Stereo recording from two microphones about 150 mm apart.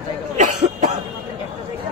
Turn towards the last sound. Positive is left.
turn(degrees=-55)  # may be behind; listen again after turning